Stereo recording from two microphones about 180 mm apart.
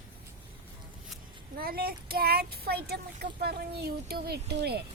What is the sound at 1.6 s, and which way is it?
Speech, 55° right (ahead or behind).